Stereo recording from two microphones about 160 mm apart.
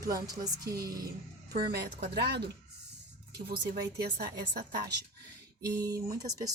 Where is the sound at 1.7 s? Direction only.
80° right.